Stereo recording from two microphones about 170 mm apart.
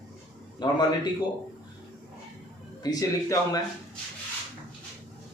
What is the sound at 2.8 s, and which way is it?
Speech, 20° left (ahead or behind).